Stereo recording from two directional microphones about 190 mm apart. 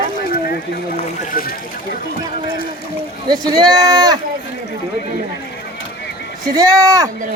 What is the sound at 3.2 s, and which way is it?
Speech, 20° right (ahead or behind).